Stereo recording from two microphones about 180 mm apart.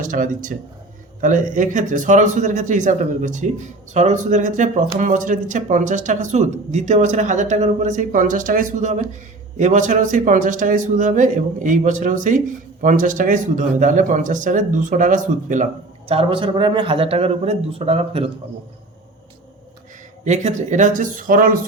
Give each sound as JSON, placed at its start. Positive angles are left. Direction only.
{"t": 0.0, "sound": "a man's voice", "side_deg": -50}
{"t": 16.0, "sound": "a man's voice", "side_deg": -30}
{"t": 20.2, "sound": "a man's voice", "side_deg": -40}